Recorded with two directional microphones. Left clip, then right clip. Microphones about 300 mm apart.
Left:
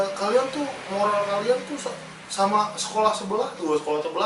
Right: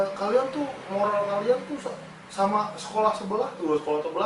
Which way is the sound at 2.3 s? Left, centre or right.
Centre.